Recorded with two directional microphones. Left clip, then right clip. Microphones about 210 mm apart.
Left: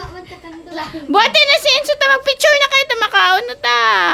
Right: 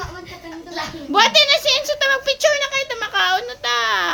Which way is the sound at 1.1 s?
40° left (ahead or behind).